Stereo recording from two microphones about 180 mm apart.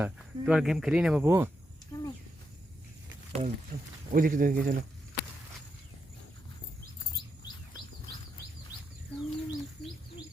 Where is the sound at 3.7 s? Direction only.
40° right (ahead or behind).